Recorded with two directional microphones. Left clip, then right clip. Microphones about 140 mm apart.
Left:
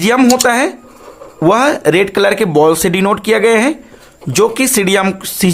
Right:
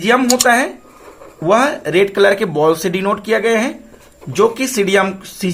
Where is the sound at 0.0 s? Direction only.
80° left.